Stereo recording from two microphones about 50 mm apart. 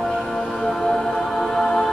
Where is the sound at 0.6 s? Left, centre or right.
Centre.